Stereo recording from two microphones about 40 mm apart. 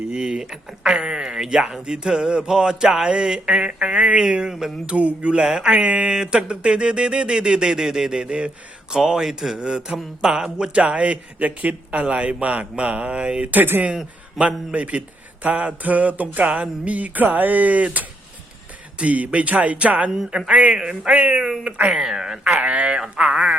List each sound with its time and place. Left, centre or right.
0.1 s speech: centre
9.0 s speech: centre
9.6 s speech: right
10.8 s speech: right
13.5 s speech: right
14.3 s speech: right
20.5 s speech: right
21.1 s speech: right
22.0 s speech: centre
22.6 s speech: right
23.0 s speech: right